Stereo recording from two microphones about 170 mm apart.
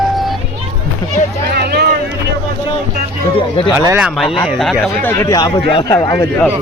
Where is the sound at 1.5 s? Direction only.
75° right (ahead or behind).